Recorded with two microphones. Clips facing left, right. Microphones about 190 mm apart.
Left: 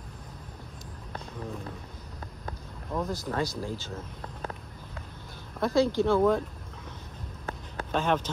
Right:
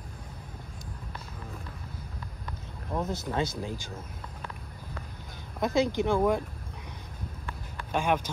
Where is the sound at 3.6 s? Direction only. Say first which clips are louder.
Left 1 dB; 15° right (ahead or behind).